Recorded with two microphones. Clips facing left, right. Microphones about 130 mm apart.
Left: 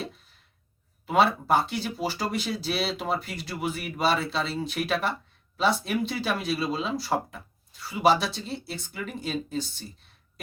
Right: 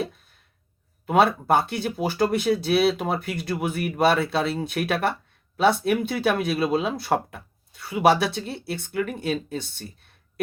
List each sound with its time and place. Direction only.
1.0 s speech: 55° right (ahead or behind)